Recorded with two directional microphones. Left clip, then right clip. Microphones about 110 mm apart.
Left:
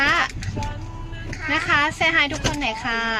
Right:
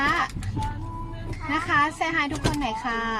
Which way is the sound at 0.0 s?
5° right (ahead or behind).